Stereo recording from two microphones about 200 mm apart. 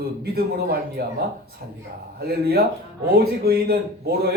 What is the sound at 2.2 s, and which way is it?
A man's voice, 50° right (ahead or behind).